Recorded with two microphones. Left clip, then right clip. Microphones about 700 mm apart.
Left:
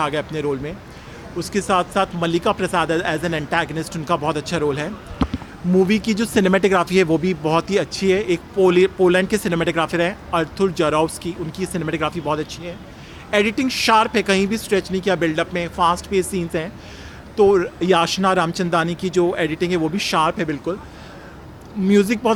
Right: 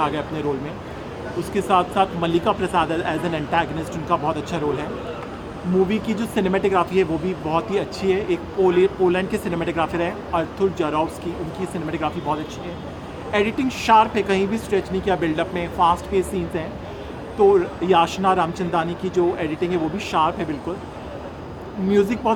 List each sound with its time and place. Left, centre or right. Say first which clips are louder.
0.0 s speech: left 1 dB; left
1.5 s speech: even; left
5.9 s speech: left 4 dB; left
21.9 s speech: left 2 dB; left